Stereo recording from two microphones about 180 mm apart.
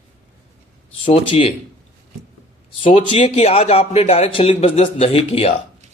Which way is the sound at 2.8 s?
35° left (ahead or behind).